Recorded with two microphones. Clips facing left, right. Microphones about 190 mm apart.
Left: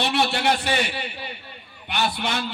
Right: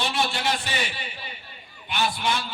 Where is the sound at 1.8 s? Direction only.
65° left (ahead or behind).